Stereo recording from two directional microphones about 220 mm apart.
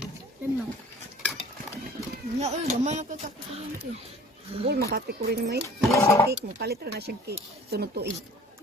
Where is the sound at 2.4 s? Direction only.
30° right (ahead or behind).